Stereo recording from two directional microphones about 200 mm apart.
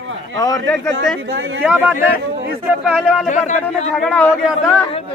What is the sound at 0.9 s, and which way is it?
Speech, 70° right (ahead or behind).